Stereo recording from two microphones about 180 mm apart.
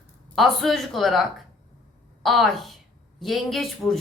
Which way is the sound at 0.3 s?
Centre (ahead or behind).